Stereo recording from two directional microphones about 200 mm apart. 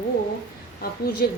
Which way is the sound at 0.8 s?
50° left (ahead or behind).